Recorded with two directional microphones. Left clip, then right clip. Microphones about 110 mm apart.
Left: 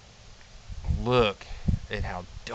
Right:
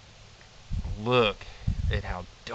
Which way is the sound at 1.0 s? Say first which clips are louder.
Even; 30° left (ahead or behind).